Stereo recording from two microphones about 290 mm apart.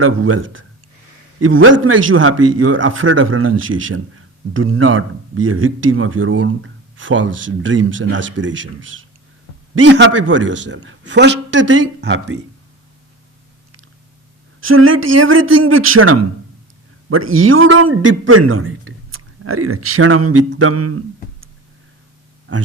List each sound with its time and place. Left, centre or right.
0.0 s speech: right
2.5 s a man's voice: right
14.6 s speech: right
22.5 s speech: right